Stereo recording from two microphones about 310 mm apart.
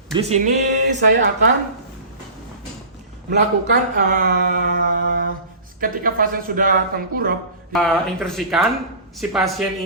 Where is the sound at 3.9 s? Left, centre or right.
Right.